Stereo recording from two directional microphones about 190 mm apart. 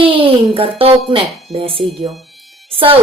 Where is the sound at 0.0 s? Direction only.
30° right (ahead or behind).